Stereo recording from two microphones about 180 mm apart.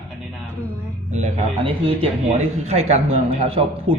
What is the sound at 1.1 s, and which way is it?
Speech, 35° right (ahead or behind).